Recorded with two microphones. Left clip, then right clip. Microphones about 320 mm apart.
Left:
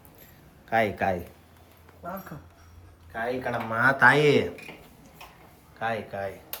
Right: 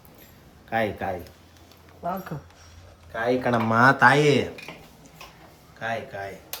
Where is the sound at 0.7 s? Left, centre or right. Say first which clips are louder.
Left 2 dB; centre.